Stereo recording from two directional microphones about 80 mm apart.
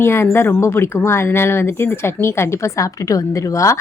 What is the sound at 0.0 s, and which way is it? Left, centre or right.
Speech, left.